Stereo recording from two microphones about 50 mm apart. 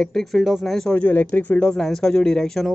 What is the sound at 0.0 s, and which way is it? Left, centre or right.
Speech, centre.